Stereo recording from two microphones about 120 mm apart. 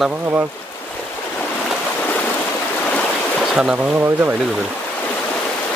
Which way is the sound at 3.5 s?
5° right (ahead or behind).